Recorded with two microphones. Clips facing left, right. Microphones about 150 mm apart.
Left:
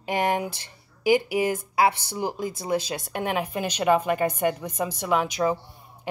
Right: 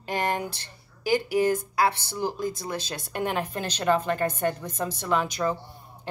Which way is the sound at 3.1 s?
5° left (ahead or behind).